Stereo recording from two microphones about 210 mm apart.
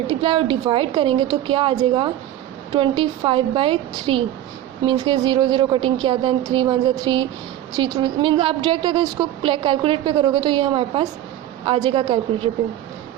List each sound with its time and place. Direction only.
0.1 s a woman's voice: 25° right (ahead or behind)